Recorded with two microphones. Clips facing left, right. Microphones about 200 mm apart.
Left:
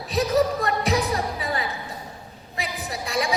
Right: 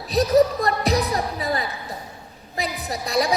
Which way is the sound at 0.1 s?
35° right (ahead or behind).